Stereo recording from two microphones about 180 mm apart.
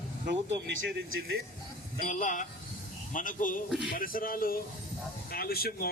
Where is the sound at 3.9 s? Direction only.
50° left (ahead or behind).